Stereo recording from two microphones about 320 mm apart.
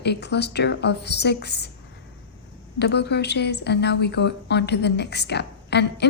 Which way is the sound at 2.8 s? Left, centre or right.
Left.